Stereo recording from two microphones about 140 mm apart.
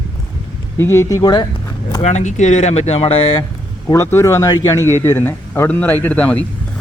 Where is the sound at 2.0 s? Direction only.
55° left (ahead or behind).